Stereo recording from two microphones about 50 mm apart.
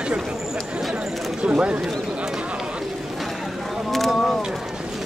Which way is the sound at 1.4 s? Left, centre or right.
Right.